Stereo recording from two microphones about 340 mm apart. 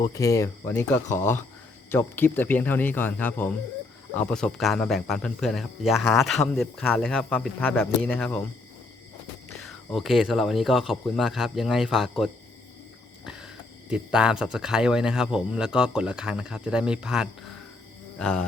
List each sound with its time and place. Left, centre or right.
0.0 s speech: centre
9.9 s speech: centre
13.2 s a sound: centre
13.9 s speech: centre